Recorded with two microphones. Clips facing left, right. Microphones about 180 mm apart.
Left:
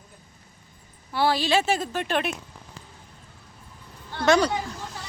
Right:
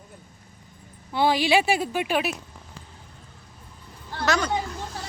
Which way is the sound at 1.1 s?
15° right (ahead or behind).